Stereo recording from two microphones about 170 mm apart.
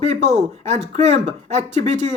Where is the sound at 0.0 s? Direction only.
40° right (ahead or behind).